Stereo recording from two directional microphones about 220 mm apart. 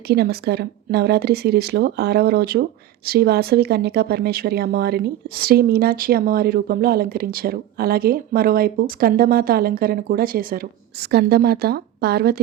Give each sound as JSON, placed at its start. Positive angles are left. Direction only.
{"t": 0.1, "sound": "speech", "side_deg": -45}